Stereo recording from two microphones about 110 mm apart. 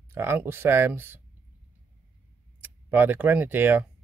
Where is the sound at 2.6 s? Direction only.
15° right (ahead or behind).